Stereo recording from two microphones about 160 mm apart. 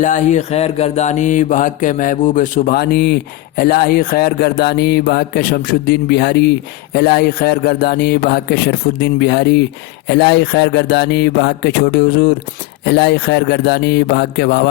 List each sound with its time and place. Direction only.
0.0 s mantra: 50° left (ahead or behind)
2.7 s speech: 80° left
3.6 s speech: 70° left (ahead or behind); by 14.7 s 90° left